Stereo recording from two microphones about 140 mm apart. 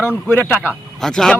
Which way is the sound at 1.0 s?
5° left (ahead or behind).